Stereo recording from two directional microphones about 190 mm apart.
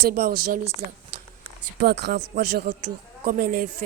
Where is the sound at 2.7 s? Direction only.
50° right (ahead or behind).